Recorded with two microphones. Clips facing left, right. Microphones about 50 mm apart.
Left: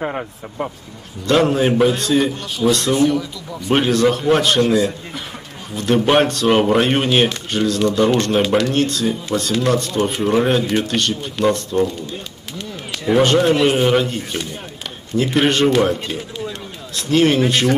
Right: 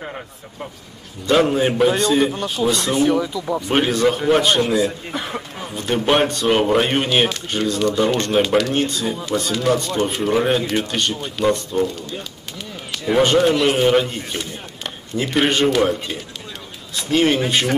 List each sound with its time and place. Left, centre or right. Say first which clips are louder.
1.2 s speech: left 1 dB; centre
2.9 s speech: left 1 dB; right
3.7 s speech: left 3 dB; centre
6.0 s speech: even; centre
12.9 s a sound: left 2 dB; centre
13.2 s speech: left 1 dB; centre